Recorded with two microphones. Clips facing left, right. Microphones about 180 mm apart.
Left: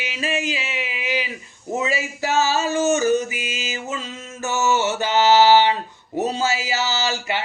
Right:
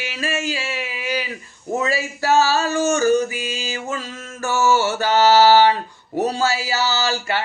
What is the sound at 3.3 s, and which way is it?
Speech, 40° right (ahead or behind).